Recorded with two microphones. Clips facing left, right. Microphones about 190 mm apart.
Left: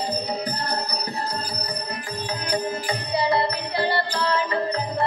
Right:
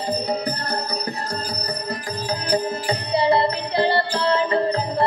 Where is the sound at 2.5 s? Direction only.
30° right (ahead or behind).